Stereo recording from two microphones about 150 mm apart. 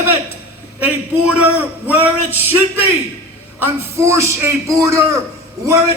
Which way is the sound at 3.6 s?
20° right (ahead or behind).